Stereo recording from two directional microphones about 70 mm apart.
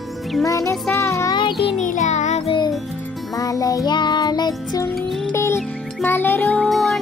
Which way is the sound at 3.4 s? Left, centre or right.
Left.